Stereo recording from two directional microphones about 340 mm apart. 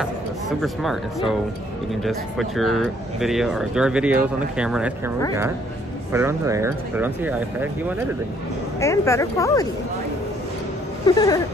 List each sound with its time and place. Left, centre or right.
0.0 s speech: centre
6.1 s speech: centre
8.7 s speech: centre
11.1 s speech: centre